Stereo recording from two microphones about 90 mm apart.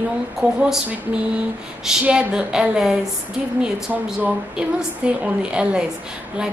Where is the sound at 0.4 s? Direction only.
10° right (ahead or behind).